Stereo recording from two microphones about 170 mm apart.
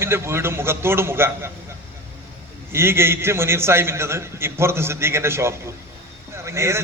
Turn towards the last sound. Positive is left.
turn(degrees=-15)  # may be behind; listen again after turning